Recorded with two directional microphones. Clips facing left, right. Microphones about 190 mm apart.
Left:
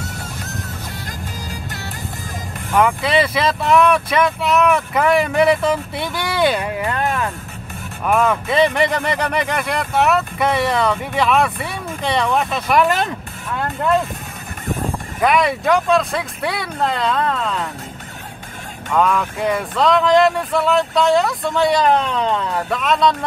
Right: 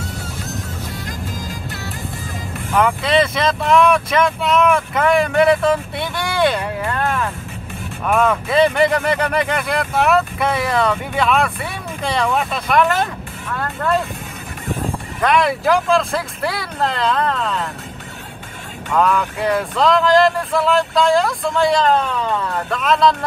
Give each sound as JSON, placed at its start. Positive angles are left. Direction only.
{"t": 2.7, "sound": "speech", "side_deg": 0}
{"t": 8.0, "sound": "speech", "side_deg": 5}
{"t": 15.1, "sound": "speech", "side_deg": 5}
{"t": 18.9, "sound": "speech", "side_deg": 0}
{"t": 21.8, "sound": "speech", "side_deg": 15}
{"t": 22.7, "sound": "speech", "side_deg": 0}